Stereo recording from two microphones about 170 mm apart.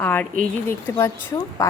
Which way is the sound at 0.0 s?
10° left (ahead or behind).